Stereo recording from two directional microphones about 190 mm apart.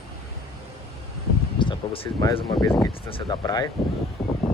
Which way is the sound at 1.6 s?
25° left (ahead or behind).